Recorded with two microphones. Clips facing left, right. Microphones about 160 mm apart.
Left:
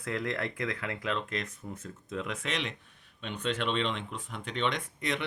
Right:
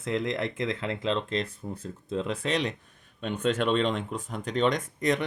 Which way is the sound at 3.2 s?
45° right (ahead or behind).